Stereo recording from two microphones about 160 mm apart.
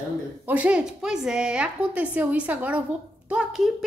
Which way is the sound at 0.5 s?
10° right (ahead or behind).